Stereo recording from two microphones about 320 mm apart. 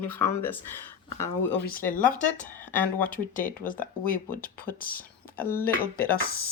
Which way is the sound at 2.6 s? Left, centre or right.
Centre.